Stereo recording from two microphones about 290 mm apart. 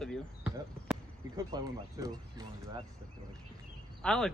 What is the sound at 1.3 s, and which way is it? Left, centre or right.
Speech, centre.